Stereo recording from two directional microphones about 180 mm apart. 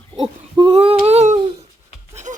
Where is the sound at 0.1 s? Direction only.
30° right (ahead or behind).